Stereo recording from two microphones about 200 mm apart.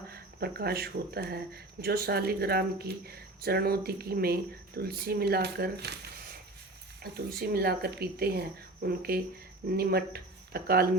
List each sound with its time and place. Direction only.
0.1 s speech: 50° right (ahead or behind)